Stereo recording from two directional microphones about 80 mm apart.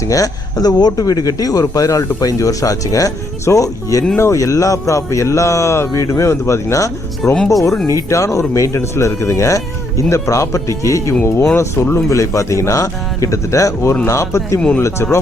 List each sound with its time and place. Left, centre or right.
0.1 s speech: left
7.3 s speech: centre
7.9 s speech: left